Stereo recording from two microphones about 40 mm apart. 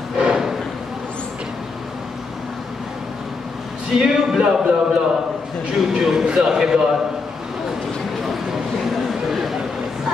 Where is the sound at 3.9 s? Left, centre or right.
Centre.